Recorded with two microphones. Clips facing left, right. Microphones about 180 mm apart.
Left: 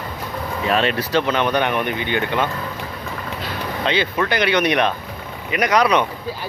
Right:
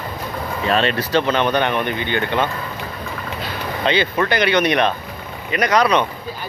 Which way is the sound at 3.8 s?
Centre (ahead or behind).